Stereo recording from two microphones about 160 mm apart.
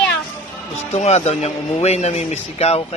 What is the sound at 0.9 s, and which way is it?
A man's voice, 40° left (ahead or behind).